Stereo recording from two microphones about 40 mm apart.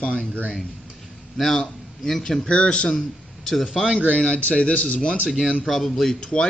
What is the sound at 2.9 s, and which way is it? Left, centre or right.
Speech, centre.